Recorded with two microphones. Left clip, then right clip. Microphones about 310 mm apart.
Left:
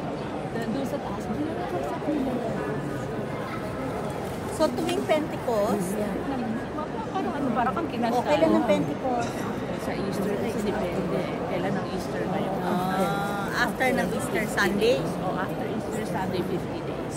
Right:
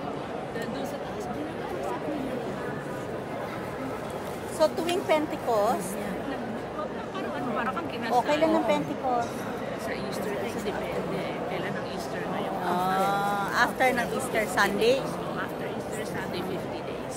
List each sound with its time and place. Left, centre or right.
4.6 s speech: centre
8.1 s speech: centre
12.7 s speech: centre